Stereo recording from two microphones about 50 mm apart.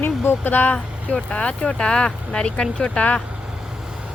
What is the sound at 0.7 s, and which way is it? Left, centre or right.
Speech, centre.